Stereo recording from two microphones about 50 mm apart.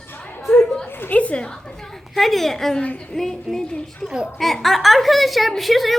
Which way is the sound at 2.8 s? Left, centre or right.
Left.